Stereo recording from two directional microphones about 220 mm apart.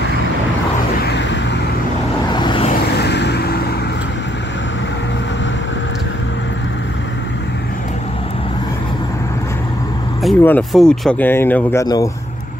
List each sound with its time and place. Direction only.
1.0 s vehicle: 50° left (ahead or behind)
2.3 s vehicle: 20° left (ahead or behind)
3.0 s vehicle: 50° left (ahead or behind)
10.2 s speech: 5° left (ahead or behind)